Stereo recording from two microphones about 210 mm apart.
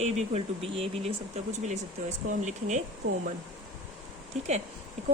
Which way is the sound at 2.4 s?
35° right (ahead or behind).